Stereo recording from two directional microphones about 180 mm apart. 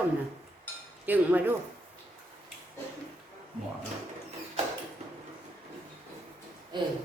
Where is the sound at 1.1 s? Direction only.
10° right (ahead or behind).